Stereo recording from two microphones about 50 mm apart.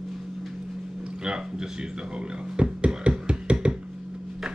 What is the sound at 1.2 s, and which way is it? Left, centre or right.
Speech, centre.